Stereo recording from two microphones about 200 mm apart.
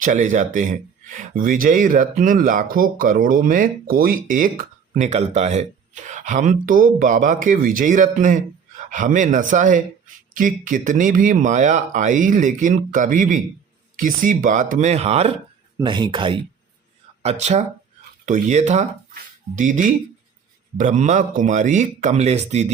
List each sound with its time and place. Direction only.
0.0 s speech: 40° right (ahead or behind)
17.2 s speech: 35° right (ahead or behind)